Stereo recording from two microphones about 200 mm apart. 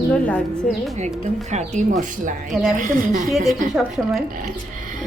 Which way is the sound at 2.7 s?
40° right (ahead or behind).